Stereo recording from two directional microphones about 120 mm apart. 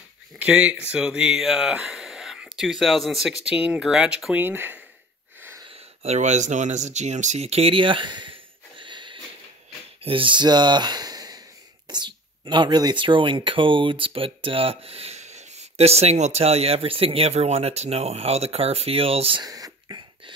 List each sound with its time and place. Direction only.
0.4 s speech: 10° right (ahead or behind)
5.7 s speech: 70° right (ahead or behind); by 19.4 s 50° right (ahead or behind)
19.4 s whispering: 30° right (ahead or behind)